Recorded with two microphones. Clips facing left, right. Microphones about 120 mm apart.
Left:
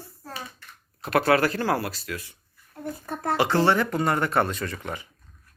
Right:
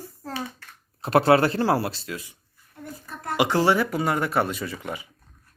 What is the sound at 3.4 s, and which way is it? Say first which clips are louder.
Speech: right 1 dB; 15° right (ahead or behind).